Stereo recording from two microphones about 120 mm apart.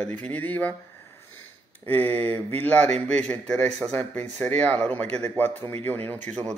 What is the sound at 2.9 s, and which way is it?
Speech, 70° right (ahead or behind).